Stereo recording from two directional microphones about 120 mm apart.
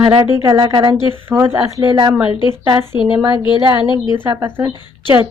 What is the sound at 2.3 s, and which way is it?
A woman's voice, 40° left (ahead or behind).